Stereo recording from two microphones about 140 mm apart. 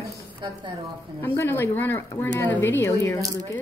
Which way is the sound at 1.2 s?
15° left (ahead or behind).